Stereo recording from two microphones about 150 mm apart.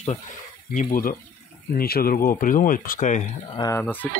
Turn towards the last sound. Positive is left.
turn(degrees=10)  # may be behind; listen again after turning